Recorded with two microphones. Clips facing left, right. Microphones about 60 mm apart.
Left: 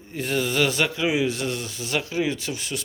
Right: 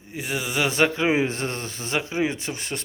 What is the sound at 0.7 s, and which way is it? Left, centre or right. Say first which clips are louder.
Speech: right 3 dB; right.